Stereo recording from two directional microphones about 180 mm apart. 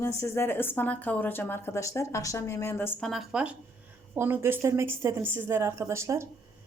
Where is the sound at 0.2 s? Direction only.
15° left (ahead or behind).